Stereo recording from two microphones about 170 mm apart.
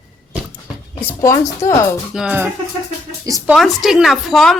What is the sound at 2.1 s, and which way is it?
Music, 5° right (ahead or behind).